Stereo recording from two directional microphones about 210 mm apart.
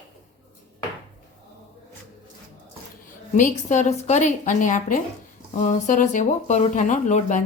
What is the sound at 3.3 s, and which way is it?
Speech, 35° left (ahead or behind).